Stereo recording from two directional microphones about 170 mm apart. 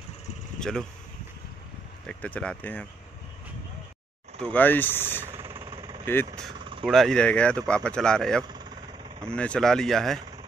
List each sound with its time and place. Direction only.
0.6 s speech: 5° left (ahead or behind)
2.0 s speech: 5° left (ahead or behind)
4.4 s speech: 10° left (ahead or behind)
5.5 s vehicle: 30° right (ahead or behind)
6.8 s speech: centre (ahead or behind)